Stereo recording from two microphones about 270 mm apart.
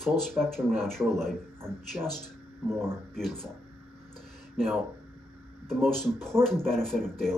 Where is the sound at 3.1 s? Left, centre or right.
Centre.